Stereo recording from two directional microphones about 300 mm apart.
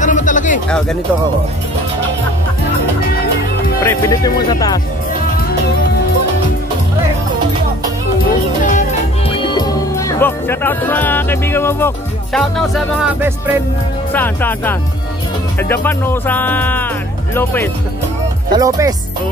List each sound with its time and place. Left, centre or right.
0.0 s music: left
0.7 s speech: centre
3.8 s speech: centre
8.7 s speech: centre
14.1 s speech: centre
18.5 s speech: centre